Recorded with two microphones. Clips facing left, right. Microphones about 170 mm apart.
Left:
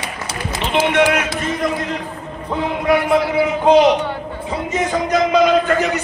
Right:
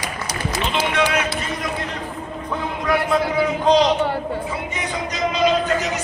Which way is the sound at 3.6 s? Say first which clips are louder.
Left 5 dB; 55° left (ahead or behind).